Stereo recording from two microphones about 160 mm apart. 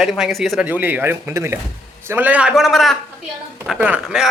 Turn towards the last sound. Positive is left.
turn(degrees=-5)  # may be behind; listen again after turning